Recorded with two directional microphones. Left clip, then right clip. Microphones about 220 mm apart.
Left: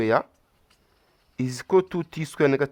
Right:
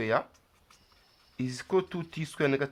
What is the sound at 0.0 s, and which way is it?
Speech, 50° left (ahead or behind).